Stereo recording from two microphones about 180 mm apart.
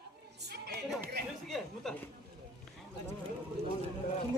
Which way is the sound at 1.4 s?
Centre (ahead or behind).